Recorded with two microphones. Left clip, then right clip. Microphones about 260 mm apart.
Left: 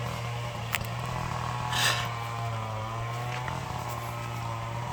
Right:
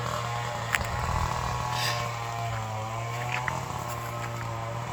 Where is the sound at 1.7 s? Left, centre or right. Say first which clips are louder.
Left 5 dB; centre.